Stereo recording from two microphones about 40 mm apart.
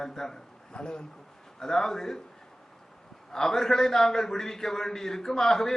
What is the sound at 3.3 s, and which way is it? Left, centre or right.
Speech, centre.